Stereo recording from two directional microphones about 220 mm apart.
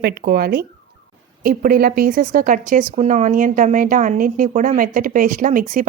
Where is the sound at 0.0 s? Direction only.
45° right (ahead or behind).